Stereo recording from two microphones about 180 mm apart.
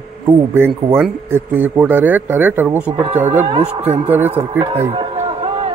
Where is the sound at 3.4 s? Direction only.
25° right (ahead or behind).